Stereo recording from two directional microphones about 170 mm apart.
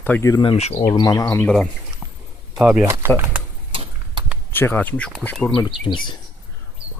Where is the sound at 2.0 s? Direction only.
25° right (ahead or behind).